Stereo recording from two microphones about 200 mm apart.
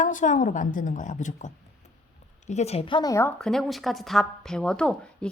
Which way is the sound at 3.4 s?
Centre (ahead or behind).